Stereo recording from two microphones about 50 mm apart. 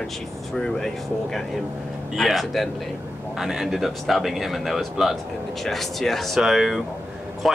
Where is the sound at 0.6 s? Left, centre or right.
Centre.